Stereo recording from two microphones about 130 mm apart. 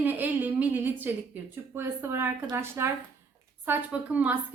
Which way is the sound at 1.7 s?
20° right (ahead or behind).